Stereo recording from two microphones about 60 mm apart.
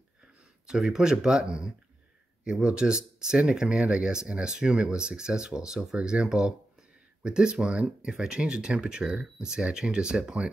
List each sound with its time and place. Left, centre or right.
0.7 s speech: centre